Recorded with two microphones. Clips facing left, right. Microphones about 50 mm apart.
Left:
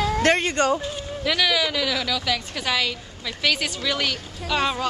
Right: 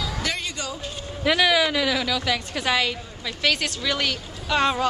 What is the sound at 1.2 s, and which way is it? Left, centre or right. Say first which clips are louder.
A woman's voice: right 3 dB; centre.